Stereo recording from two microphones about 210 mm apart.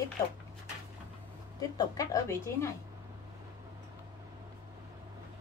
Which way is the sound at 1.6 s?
15° left (ahead or behind).